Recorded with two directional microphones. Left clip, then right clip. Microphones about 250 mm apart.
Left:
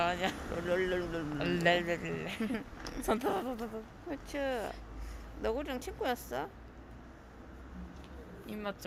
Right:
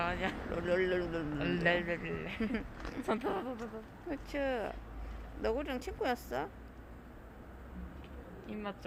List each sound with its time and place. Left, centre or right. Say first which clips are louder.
0.0 s a sound: left 3 dB; left
0.5 s speech: right 2 dB; centre
1.4 s speech: left 3 dB; left
2.4 s speech: even; centre
3.1 s speech: left 3 dB; left
4.1 s speech: even; centre
8.4 s a woman's voice: left 2 dB; left